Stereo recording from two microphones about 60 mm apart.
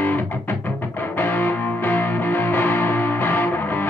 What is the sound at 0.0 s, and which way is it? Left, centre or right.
Music, left.